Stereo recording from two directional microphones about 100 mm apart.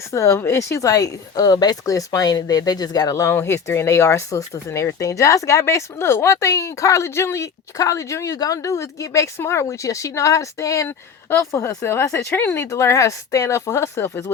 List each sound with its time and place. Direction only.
0.1 s a woman's voice: 30° left (ahead or behind)